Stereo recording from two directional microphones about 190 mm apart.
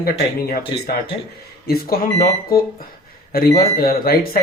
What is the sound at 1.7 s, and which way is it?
Speech, 50° left (ahead or behind).